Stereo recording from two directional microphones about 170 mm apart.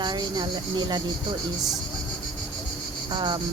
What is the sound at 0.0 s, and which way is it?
Speech, 25° right (ahead or behind).